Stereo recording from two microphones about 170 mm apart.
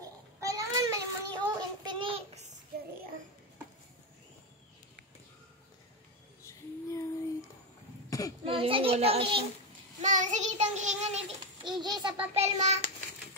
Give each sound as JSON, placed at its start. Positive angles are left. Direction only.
{"t": 0.0, "sound": "child singing", "side_deg": -20}
{"t": 6.4, "sound": "a sound", "side_deg": 15}
{"t": 8.1, "sound": "a sound", "side_deg": 20}
{"t": 8.5, "sound": "a child's voice", "side_deg": -30}
{"t": 10.0, "sound": "child singing", "side_deg": -45}
{"t": 11.6, "sound": "a child's voice", "side_deg": -25}
{"t": 12.4, "sound": "a child's voice", "side_deg": -40}